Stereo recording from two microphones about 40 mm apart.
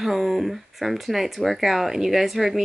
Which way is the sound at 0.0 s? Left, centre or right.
Centre.